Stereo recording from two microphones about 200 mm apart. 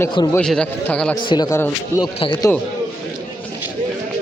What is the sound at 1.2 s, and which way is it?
Speech, 20° left (ahead or behind).